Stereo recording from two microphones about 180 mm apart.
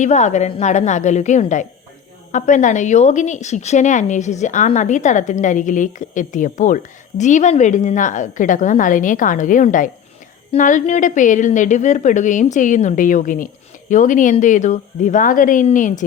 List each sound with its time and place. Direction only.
0.0 s a woman's voice: 40° left (ahead or behind)